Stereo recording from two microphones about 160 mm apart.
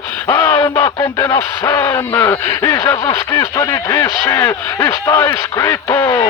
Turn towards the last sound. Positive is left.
turn(degrees=20)  # may be behind; listen again after turning